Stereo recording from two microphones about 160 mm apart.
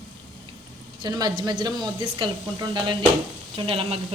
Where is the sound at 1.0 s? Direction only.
25° right (ahead or behind).